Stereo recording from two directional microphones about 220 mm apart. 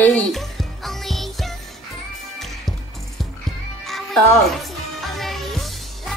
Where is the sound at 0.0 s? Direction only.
5° left (ahead or behind).